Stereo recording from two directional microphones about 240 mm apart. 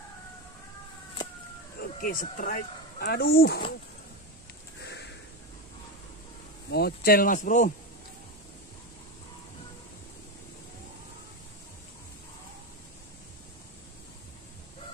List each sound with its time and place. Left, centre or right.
1.8 s speech: left
6.7 s speech: left